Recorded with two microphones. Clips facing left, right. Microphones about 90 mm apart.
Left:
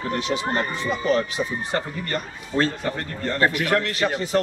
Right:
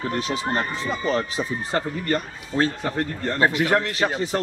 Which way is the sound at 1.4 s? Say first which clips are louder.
Even; 10° right (ahead or behind).